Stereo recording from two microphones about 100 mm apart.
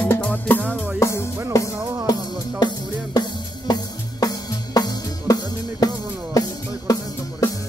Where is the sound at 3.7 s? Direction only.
40° left (ahead or behind).